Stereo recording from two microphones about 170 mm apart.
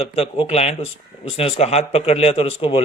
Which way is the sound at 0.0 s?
35° left (ahead or behind).